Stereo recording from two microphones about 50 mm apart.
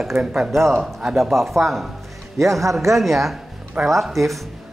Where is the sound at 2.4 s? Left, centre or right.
Right.